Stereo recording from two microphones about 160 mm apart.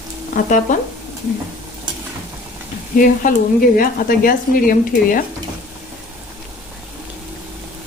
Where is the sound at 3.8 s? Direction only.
65° left (ahead or behind).